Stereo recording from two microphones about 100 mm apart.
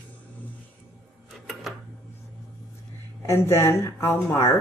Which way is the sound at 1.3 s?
Centre (ahead or behind).